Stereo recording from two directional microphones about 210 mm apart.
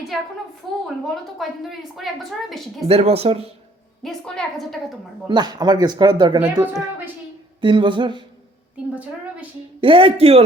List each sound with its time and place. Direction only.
0.6 s a woman's voice: centre (ahead or behind)
2.8 s speech: 30° right (ahead or behind)
4.0 s a woman's voice: centre (ahead or behind)
5.3 s speech: 20° right (ahead or behind)
9.8 s speech: 25° right (ahead or behind)